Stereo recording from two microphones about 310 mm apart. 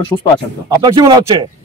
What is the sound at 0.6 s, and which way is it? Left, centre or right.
Speech, centre.